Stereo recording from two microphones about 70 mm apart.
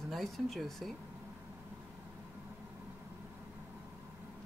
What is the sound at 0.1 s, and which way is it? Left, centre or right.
Speech, centre.